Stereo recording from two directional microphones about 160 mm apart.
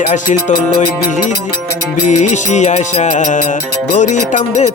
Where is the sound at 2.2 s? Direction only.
45° left (ahead or behind).